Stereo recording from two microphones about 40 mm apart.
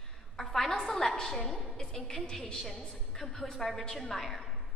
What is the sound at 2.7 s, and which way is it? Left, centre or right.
A woman's voice, centre.